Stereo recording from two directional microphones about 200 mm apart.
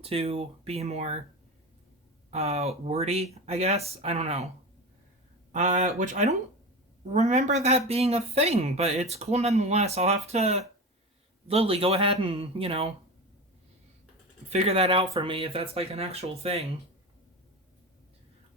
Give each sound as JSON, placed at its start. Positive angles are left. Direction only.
{"t": 0.0, "sound": "speech", "side_deg": -30}
{"t": 2.3, "sound": "speech", "side_deg": -35}
{"t": 5.5, "sound": "speech", "side_deg": -35}
{"t": 14.5, "sound": "speech", "side_deg": -30}